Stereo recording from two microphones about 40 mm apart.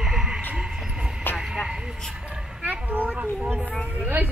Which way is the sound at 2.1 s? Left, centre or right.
Right.